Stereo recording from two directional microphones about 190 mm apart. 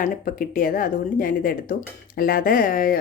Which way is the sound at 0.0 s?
45° left (ahead or behind).